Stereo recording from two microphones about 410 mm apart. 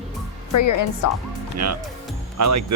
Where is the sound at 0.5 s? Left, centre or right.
Left.